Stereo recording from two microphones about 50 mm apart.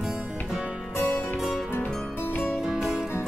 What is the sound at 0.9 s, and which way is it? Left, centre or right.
Music, left.